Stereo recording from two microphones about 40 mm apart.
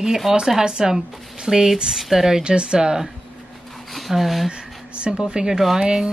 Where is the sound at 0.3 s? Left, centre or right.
Centre.